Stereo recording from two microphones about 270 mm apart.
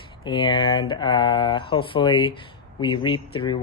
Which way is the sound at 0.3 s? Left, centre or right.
Centre.